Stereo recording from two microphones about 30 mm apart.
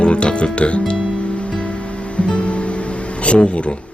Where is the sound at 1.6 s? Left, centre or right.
Left.